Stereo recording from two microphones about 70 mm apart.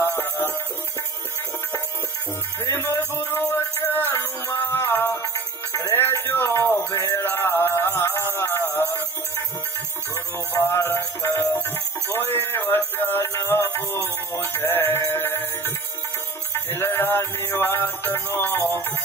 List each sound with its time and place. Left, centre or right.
0.0 s music: left
2.6 s music: left
5.7 s music: left
5.9 s a sound: left
7.0 s music: left
10.1 s music: left
12.3 s a sound: left
14.3 s sheep: left
15.0 s music: left